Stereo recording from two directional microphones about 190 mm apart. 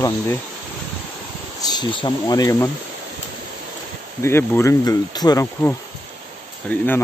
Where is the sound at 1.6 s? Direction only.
20° left (ahead or behind).